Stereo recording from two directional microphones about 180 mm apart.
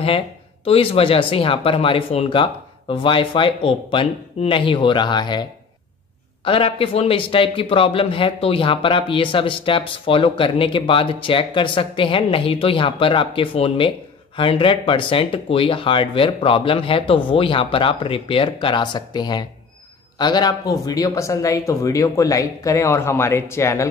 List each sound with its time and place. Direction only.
0.7 s a man's voice: 30° left (ahead or behind); by 23.9 s 15° left (ahead or behind)